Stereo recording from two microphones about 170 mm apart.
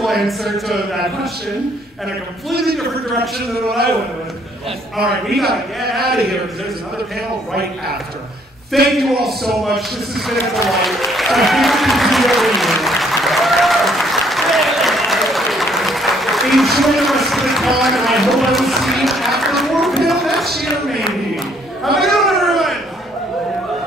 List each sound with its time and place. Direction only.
0.0 s a man's voice: centre (ahead or behind)
5.3 s a man's voice: centre (ahead or behind)
5.9 s a man's voice: 65° right (ahead or behind)
8.9 s a man's voice: centre (ahead or behind)
10.4 s applause: centre (ahead or behind)
21.8 s a sound: centre (ahead or behind)